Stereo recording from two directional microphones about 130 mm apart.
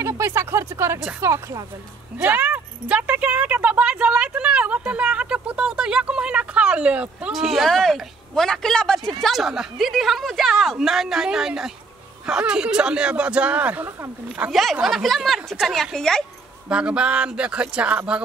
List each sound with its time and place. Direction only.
0.0 s speech: 20° right (ahead or behind)
2.1 s a woman's voice: 10° right (ahead or behind)
14.5 s a woman's voice: centre (ahead or behind)
16.6 s speech: 10° right (ahead or behind)